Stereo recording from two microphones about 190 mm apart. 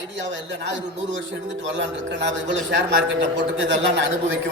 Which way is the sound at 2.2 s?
70° right (ahead or behind).